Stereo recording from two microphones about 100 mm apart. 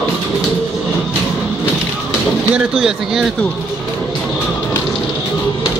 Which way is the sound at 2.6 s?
5° right (ahead or behind).